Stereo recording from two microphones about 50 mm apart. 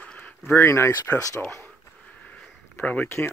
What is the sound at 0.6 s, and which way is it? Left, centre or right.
Speech, left.